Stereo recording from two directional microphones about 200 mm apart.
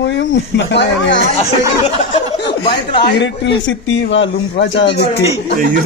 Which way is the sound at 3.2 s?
65° left (ahead or behind).